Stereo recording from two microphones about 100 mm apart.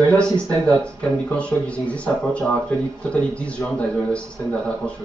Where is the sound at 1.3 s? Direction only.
10° left (ahead or behind).